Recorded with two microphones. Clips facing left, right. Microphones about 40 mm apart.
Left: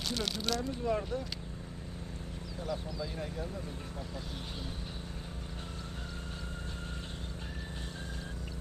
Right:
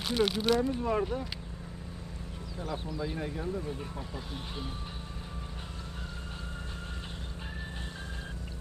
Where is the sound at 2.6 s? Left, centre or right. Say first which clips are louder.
Right 2 dB; right.